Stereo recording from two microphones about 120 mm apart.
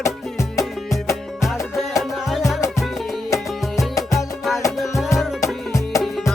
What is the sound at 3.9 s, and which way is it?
Music, 30° left (ahead or behind).